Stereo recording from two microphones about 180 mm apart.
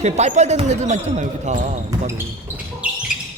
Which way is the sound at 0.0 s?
40° right (ahead or behind).